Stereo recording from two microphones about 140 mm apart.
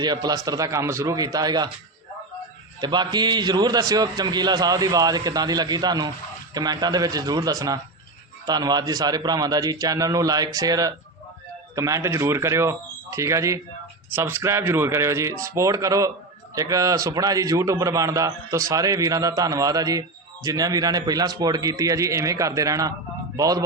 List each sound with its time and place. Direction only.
0.0 s a man's voice: 30° right (ahead or behind)
2.8 s a man's voice: 30° right (ahead or behind)